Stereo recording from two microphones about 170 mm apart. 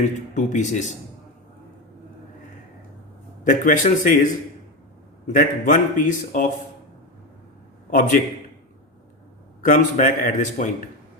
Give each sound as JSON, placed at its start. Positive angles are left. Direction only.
{"t": 0.0, "sound": "a man's voice", "side_deg": 45}
{"t": 3.4, "sound": "a man's voice", "side_deg": 50}
{"t": 5.3, "sound": "a man's voice", "side_deg": 50}
{"t": 7.9, "sound": "a man's voice", "side_deg": 50}
{"t": 9.6, "sound": "a man's voice", "side_deg": 50}